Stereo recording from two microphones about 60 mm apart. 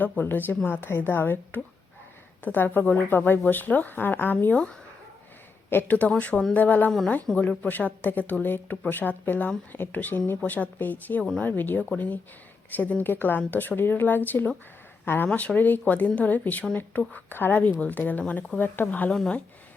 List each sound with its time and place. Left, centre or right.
0.0 s speech: left
5.7 s speech: left
7.3 s speech: centre
7.6 s speech: left
15.3 s speech: centre
15.5 s speech: left